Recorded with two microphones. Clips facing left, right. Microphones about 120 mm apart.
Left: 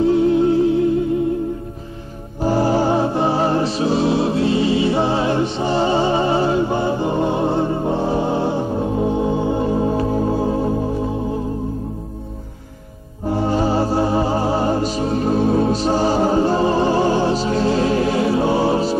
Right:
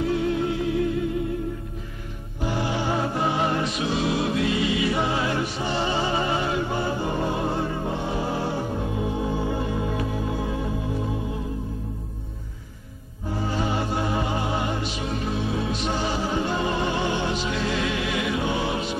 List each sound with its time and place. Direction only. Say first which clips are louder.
0.0 s music: left 9 dB; 30° left (ahead or behind)
2.4 s music: left 9 dB; 40° left (ahead or behind)
13.5 s music: left 8 dB; 35° left (ahead or behind)